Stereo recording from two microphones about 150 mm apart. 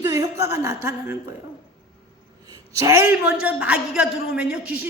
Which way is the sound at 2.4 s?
20° right (ahead or behind).